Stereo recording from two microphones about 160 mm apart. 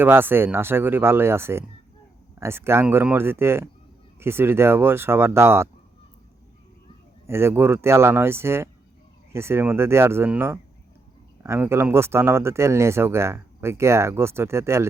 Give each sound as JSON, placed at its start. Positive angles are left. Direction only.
{"t": 0.0, "sound": "speech", "side_deg": -15}
{"t": 7.3, "sound": "speech", "side_deg": -15}